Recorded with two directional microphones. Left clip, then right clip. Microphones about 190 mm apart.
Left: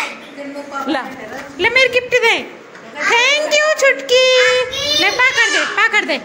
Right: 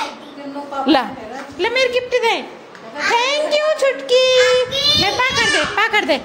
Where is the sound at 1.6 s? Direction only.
5° right (ahead or behind).